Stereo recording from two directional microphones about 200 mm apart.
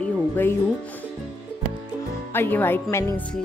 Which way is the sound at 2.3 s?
10° left (ahead or behind).